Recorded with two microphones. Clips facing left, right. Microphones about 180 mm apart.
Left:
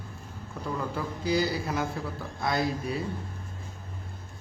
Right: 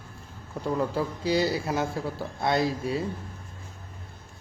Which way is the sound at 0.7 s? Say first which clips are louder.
Right 5 dB; 30° right (ahead or behind).